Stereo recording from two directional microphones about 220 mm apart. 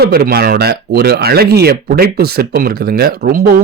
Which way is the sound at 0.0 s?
45° right (ahead or behind).